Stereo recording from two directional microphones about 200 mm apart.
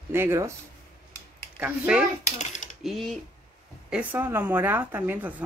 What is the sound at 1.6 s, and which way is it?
Speech, 5° right (ahead or behind).